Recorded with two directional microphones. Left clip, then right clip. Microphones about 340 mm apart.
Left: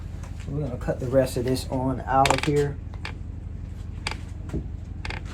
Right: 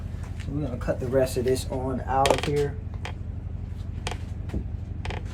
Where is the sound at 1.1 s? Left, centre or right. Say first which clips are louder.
Left 1 dB; centre.